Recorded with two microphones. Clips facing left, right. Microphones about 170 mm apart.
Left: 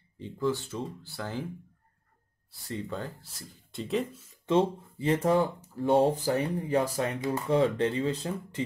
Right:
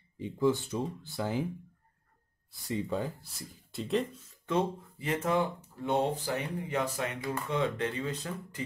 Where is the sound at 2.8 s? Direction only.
Centre (ahead or behind).